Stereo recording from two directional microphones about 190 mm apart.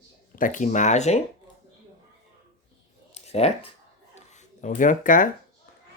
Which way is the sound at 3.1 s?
35° left (ahead or behind).